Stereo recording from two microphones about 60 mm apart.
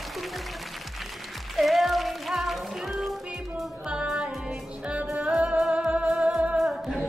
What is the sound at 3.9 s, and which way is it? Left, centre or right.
Music, centre.